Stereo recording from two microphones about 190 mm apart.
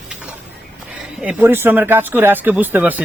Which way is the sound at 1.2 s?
10° right (ahead or behind).